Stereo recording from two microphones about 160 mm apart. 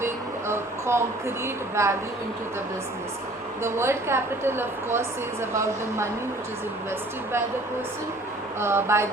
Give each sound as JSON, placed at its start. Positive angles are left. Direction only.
{"t": 0.0, "sound": "a sound", "side_deg": -15}
{"t": 1.7, "sound": "a woman's voice", "side_deg": -15}
{"t": 3.6, "sound": "a woman's voice", "side_deg": -15}
{"t": 8.6, "sound": "a woman's voice", "side_deg": -15}